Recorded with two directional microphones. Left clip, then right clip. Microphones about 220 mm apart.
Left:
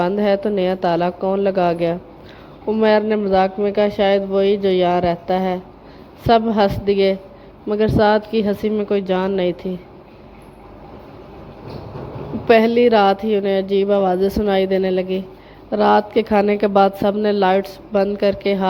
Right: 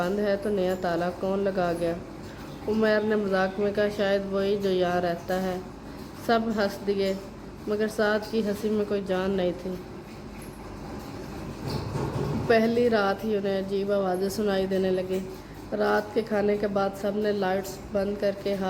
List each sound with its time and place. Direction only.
0.0 s a woman's voice: 30° left (ahead or behind)
12.5 s a woman's voice: 30° left (ahead or behind)